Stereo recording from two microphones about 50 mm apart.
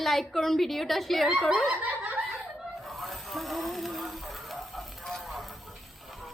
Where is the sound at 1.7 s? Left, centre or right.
Right.